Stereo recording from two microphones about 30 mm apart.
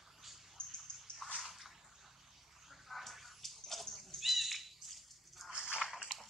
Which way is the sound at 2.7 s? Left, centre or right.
Centre.